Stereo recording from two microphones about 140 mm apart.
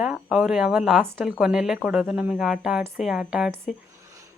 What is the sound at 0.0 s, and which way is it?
Speech, 5° right (ahead or behind).